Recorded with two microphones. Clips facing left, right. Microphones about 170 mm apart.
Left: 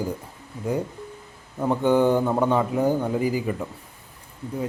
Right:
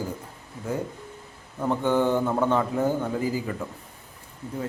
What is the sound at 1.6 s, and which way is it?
A man's voice, 15° left (ahead or behind).